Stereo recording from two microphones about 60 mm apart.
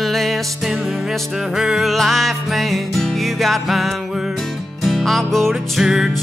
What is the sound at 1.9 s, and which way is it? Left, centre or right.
Music, centre.